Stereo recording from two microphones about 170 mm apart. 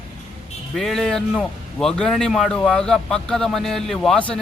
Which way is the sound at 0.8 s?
Centre (ahead or behind).